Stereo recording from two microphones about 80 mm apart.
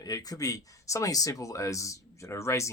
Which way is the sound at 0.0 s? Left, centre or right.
Left.